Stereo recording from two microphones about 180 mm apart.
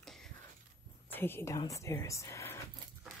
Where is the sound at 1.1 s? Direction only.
15° left (ahead or behind).